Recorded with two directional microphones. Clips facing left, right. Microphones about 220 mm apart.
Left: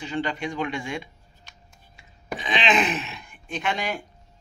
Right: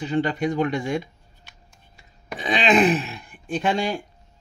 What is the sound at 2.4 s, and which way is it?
Speech, 35° right (ahead or behind).